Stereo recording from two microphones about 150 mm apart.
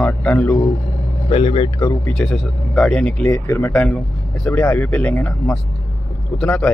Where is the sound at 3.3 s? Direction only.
15° left (ahead or behind).